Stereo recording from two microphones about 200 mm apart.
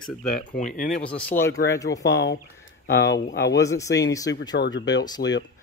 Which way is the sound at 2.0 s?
60° left (ahead or behind).